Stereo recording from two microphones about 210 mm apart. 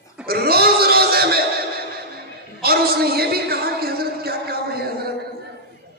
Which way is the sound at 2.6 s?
45° right (ahead or behind).